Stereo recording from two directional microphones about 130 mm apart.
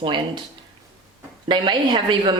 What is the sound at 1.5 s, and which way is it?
Speech, 35° right (ahead or behind).